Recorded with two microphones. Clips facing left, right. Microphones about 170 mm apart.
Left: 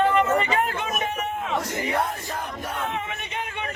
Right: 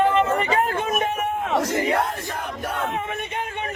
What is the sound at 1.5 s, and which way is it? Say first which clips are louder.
Speech: right 6 dB; 70° right (ahead or behind).